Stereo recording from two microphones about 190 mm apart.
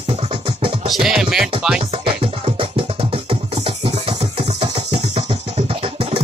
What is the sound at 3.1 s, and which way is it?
Music, 30° right (ahead or behind).